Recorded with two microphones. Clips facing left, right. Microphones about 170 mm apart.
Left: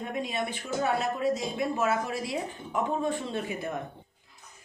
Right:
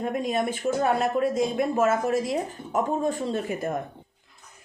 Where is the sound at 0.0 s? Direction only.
45° right (ahead or behind).